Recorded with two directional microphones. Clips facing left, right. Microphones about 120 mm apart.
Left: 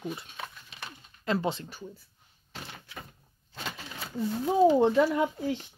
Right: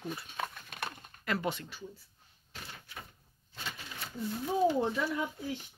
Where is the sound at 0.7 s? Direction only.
55° right (ahead or behind).